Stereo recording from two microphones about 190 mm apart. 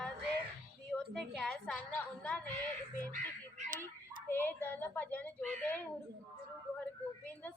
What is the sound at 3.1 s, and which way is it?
Crow, 40° right (ahead or behind).